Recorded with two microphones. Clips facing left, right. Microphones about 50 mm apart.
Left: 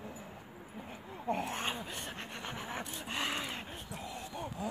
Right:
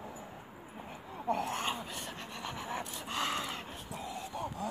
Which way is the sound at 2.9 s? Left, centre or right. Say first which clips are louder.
Right 1 dB; centre.